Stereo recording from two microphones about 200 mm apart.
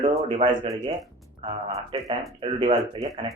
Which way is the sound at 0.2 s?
35° right (ahead or behind).